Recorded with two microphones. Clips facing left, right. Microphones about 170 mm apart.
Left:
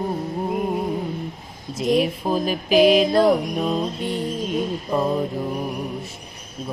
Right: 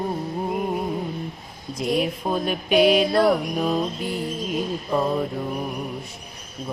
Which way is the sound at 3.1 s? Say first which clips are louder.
Left 2 dB; 20° left (ahead or behind).